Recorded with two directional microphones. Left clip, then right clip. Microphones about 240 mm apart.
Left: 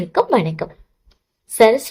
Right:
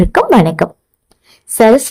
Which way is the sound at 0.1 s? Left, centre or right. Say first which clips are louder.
Right 4 dB; right.